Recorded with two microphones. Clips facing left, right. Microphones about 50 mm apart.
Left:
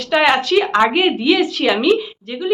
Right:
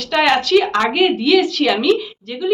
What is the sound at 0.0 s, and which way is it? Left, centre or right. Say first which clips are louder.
Speech: left 1 dB; centre.